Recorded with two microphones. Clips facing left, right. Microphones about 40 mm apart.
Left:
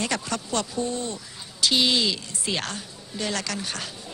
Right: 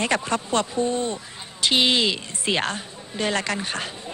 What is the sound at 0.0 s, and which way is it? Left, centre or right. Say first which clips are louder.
Speech: right 5 dB; right.